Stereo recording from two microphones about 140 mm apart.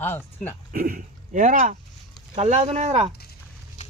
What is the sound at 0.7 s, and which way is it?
Speech, 90° right.